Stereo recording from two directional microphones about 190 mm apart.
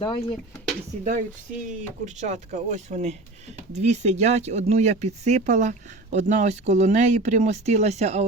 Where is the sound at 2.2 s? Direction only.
40° right (ahead or behind).